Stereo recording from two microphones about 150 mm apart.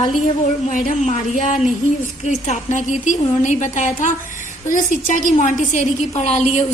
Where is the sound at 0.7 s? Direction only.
55° left (ahead or behind).